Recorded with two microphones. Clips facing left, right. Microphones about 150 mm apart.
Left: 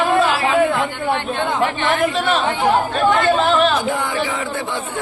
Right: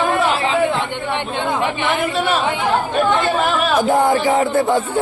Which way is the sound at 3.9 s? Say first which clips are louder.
Right 7 dB; 40° right (ahead or behind).